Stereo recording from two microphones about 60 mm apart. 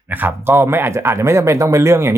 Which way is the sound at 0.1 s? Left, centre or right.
Right.